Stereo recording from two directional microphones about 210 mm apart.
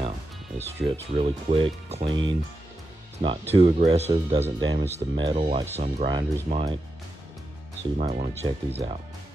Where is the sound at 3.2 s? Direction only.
25° right (ahead or behind).